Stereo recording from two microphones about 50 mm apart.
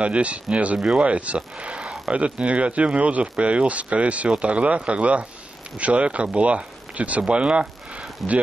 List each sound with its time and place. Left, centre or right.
0.0 s speech: right
0.7 s speech: centre
1.0 s speech: right
8.2 s speech: centre